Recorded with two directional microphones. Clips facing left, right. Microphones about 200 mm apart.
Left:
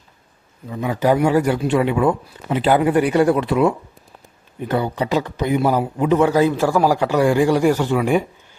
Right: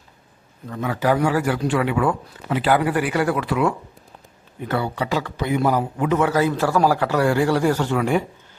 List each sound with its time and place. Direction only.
0.7 s a man's voice: 15° left (ahead or behind)